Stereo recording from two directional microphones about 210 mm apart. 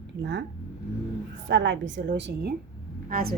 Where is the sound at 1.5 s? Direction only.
60° right (ahead or behind).